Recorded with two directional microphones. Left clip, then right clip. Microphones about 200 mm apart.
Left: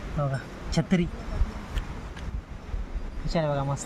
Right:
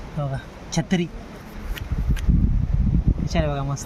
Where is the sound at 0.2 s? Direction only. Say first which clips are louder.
Even; 15° right (ahead or behind).